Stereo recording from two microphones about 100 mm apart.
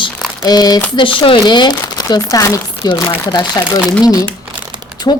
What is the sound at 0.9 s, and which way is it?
Speech, 55° left (ahead or behind).